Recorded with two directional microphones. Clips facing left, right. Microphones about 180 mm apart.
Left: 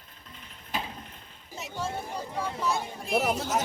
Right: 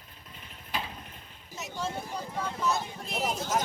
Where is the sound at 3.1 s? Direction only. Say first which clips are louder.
Left 6 dB; 65° left (ahead or behind).